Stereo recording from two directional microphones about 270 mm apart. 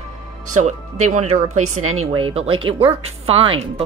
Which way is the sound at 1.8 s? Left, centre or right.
Right.